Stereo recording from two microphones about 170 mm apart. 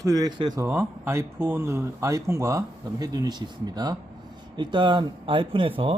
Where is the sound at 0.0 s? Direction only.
20° right (ahead or behind).